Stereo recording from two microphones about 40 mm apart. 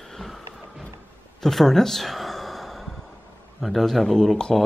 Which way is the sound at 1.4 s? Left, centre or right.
Centre.